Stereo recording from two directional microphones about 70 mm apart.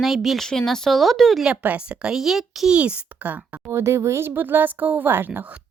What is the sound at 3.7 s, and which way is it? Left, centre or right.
Speech, right.